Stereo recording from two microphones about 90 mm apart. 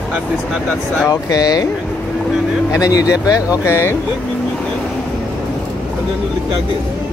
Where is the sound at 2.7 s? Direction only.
40° left (ahead or behind).